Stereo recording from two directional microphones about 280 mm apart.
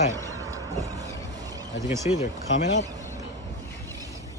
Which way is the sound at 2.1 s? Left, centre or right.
Left.